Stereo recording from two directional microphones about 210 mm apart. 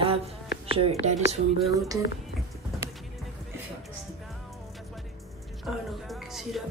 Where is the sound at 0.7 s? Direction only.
25° right (ahead or behind).